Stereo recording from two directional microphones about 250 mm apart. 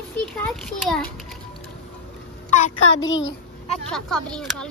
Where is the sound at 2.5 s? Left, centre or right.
Left.